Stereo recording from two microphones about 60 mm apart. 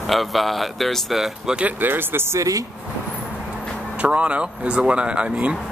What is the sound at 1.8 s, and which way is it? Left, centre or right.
Speech, right.